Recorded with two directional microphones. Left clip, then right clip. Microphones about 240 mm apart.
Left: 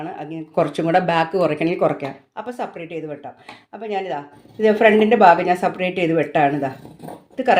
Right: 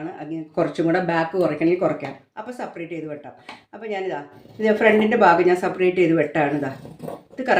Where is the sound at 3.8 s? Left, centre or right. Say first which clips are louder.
Left 2 dB; left.